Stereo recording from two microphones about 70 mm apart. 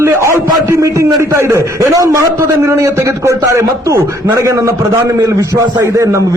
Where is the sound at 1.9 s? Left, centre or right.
Right.